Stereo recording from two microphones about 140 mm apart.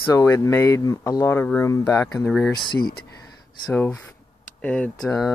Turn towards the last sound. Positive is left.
turn(degrees=0)  # may be behind; listen again after turning